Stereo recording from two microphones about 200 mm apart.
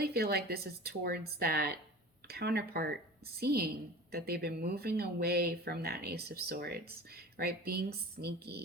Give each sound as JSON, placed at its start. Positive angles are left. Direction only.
{"t": 0.0, "sound": "speech", "side_deg": -50}